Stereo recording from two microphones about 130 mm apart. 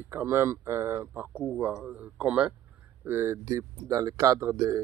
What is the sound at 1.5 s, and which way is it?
A man's voice, 10° right (ahead or behind).